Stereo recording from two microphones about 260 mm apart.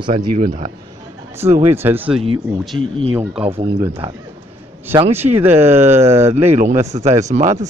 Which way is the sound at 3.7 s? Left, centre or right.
Centre.